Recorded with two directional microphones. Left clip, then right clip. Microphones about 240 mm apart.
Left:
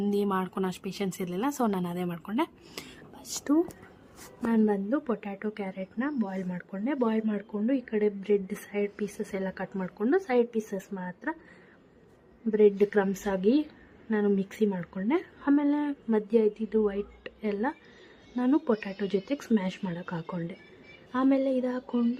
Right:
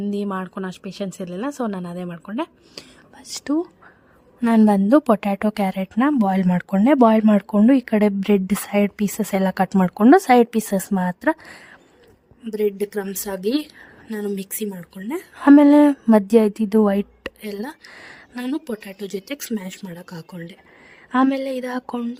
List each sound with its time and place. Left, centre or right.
0.0 s speech: centre
3.2 s speech: right
4.4 s a woman's voice: right
12.5 s speech: centre
13.1 s a woman's voice: right
14.7 s speech: centre
15.2 s a woman's voice: right
18.5 s speech: centre
19.3 s a woman's voice: right
19.8 s speech: centre
20.3 s a woman's voice: right